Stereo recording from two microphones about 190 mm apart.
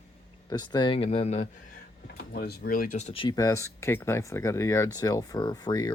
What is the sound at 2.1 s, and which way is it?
Speech, 55° left (ahead or behind).